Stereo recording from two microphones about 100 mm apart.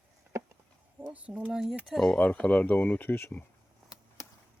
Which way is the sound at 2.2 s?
15° left (ahead or behind).